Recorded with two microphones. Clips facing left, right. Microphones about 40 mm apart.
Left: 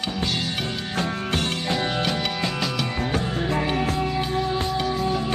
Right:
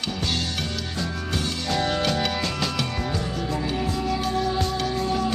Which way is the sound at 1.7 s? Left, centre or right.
Centre.